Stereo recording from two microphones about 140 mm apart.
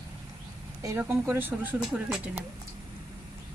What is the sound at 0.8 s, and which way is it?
Speech, 20° right (ahead or behind).